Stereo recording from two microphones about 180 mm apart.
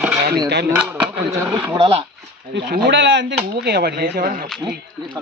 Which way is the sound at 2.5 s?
75° right (ahead or behind).